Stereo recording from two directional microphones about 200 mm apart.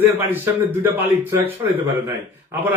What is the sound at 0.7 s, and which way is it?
Speech, 10° right (ahead or behind).